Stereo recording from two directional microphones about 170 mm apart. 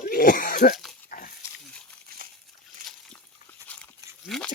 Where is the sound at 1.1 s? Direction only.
55° left (ahead or behind).